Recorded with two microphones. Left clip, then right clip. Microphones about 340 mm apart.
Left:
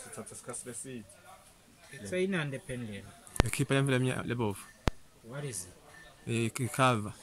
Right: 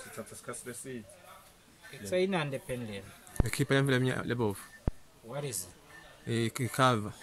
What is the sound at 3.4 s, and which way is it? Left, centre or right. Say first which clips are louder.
Speech: right 4 dB; centre.